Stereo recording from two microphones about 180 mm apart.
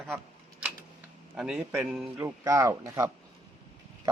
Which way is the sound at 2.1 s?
15° right (ahead or behind).